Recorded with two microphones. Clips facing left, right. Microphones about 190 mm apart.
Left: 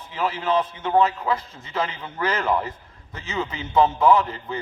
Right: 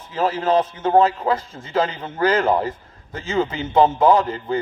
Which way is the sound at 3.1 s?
45° right (ahead or behind).